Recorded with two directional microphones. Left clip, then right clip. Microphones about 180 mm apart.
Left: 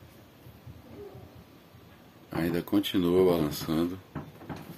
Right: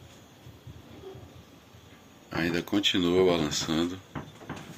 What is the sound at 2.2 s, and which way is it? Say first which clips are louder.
Speech: right 1 dB; 15° left (ahead or behind).